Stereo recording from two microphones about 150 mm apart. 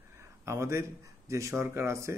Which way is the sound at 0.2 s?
20° right (ahead or behind).